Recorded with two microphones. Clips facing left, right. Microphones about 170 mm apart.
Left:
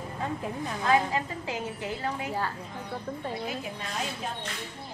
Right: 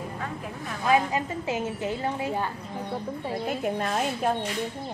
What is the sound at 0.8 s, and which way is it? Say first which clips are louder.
A woman's voice: right 2 dB; 20° right (ahead or behind).